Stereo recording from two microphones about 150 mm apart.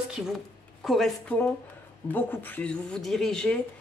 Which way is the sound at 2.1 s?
15° left (ahead or behind).